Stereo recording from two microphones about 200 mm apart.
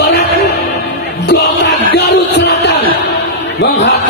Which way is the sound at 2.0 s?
55° left (ahead or behind).